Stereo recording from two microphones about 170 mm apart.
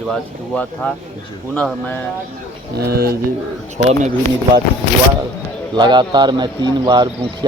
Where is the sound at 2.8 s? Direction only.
65° right (ahead or behind).